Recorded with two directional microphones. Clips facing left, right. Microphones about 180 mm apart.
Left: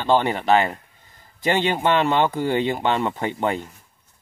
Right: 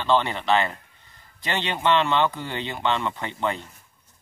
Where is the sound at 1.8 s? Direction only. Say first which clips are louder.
Even; 45° left (ahead or behind).